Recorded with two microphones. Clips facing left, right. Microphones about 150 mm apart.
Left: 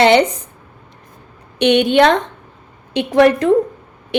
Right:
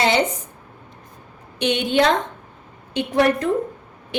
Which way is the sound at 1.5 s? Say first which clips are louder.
Left 7 dB; 70° left (ahead or behind).